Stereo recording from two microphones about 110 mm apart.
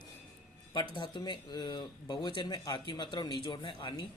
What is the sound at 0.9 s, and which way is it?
Speech, 45° left (ahead or behind).